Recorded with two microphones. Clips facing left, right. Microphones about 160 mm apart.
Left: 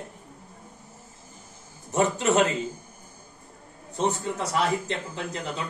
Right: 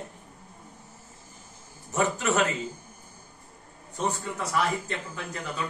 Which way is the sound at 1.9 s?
20° left (ahead or behind).